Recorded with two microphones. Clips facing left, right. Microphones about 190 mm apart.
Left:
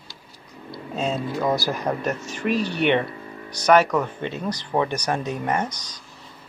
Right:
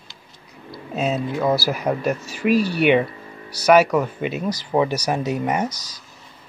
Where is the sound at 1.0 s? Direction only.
5° right (ahead or behind).